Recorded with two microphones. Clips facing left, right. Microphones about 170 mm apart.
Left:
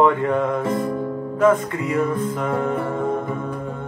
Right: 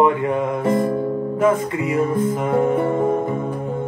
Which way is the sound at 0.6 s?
25° right (ahead or behind).